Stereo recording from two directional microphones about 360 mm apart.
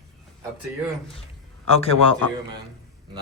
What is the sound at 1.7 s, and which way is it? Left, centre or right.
Speech, centre.